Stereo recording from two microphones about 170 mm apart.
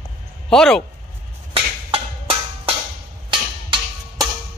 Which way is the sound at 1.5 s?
35° right (ahead or behind).